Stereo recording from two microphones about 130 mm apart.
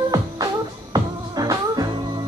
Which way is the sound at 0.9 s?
30° right (ahead or behind).